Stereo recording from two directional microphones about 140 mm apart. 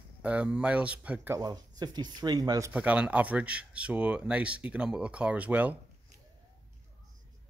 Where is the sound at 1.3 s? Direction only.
30° right (ahead or behind).